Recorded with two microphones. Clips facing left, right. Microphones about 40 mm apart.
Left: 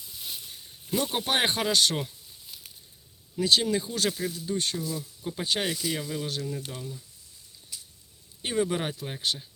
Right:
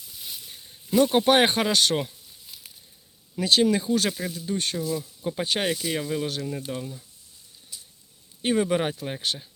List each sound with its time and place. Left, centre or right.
0.2 s a sound: centre
0.4 s speech: right
3.3 s speech: right
8.4 s speech: right
9.2 s speech: right